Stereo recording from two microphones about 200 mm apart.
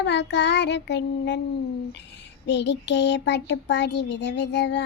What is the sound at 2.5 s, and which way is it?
Child singing, 60° left (ahead or behind).